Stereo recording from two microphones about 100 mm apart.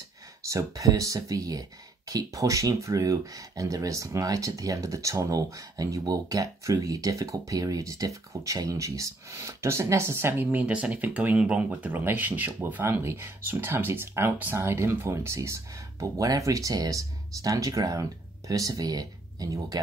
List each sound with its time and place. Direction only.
0.5 s speech: 35° right (ahead or behind)